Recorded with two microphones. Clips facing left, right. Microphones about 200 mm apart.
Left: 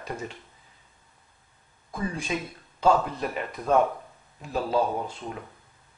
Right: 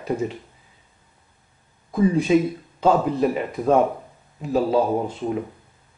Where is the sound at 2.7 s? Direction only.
5° right (ahead or behind).